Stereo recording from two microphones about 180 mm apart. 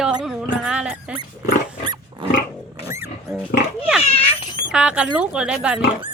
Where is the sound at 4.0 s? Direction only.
30° left (ahead or behind).